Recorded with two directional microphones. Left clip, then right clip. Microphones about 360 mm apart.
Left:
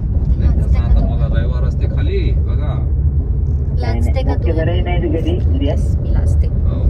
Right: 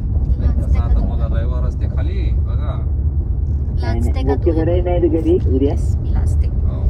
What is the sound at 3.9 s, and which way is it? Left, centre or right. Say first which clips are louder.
Vehicle: right 2 dB; centre.